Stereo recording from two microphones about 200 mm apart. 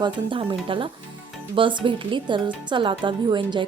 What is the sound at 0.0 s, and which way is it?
Speech, 25° right (ahead or behind).